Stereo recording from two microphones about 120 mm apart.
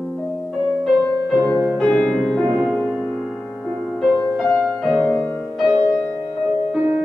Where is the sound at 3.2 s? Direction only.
Centre (ahead or behind).